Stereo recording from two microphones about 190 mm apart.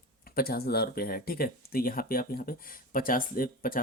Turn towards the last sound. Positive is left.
turn(degrees=50)  # may be behind; listen again after turning